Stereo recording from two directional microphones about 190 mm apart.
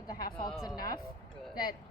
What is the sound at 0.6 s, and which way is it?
Speech, 20° left (ahead or behind).